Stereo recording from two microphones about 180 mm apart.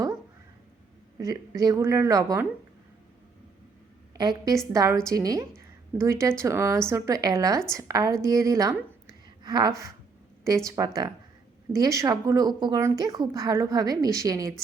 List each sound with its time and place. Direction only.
1.2 s a woman's voice: 20° right (ahead or behind)
4.2 s a woman's voice: 20° right (ahead or behind)